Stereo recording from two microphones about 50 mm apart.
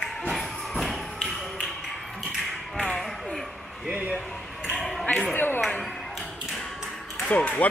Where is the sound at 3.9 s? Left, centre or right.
Right.